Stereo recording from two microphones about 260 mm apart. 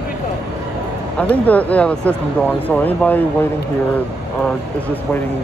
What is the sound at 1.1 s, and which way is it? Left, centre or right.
Speech, centre.